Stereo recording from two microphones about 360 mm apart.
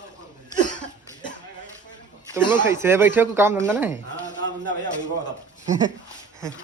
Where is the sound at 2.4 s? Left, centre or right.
Centre.